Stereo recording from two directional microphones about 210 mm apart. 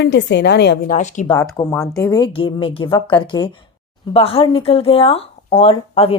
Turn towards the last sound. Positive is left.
turn(degrees=30)  # may be behind; listen again after turning